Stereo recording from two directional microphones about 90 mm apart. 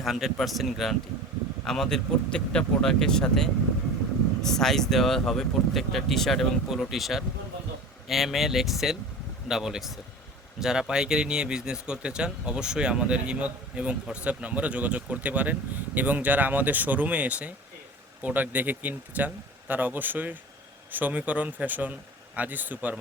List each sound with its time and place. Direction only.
0.0 s speech: 5° right (ahead or behind); by 23.0 s 20° right (ahead or behind)